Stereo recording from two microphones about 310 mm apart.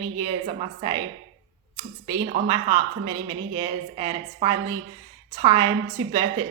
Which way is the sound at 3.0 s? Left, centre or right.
Centre.